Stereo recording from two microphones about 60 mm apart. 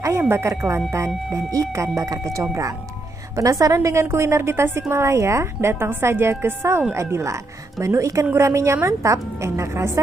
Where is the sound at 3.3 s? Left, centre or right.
Right.